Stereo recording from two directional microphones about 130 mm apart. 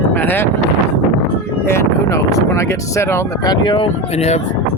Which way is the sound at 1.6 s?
20° left (ahead or behind).